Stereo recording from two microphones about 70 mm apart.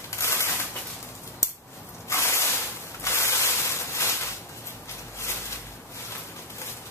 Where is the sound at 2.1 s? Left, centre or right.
Left.